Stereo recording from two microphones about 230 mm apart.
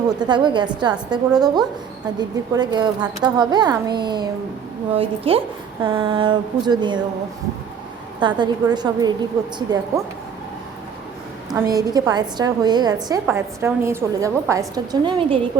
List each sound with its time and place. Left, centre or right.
0.2 s a woman's voice: centre
8.2 s speech: centre
11.5 s a woman's voice: centre